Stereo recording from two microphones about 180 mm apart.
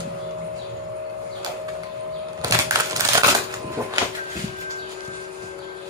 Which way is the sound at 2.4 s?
20° right (ahead or behind).